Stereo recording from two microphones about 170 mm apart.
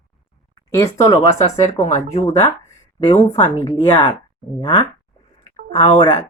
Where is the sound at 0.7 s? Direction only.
20° left (ahead or behind).